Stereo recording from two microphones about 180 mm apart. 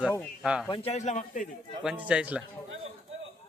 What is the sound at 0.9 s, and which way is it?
Speech, 40° left (ahead or behind).